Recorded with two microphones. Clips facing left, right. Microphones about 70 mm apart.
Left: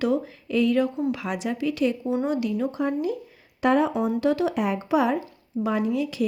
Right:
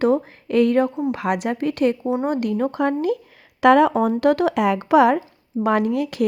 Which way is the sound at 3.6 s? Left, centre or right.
Right.